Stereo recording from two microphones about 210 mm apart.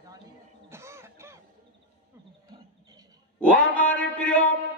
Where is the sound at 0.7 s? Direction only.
10° right (ahead or behind).